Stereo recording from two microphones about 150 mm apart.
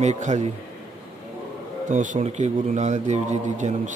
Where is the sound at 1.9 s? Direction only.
55° right (ahead or behind).